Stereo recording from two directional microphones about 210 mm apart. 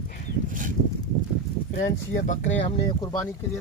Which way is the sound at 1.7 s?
35° left (ahead or behind).